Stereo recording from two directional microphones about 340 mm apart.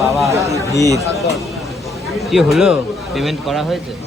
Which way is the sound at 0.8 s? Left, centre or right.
Centre.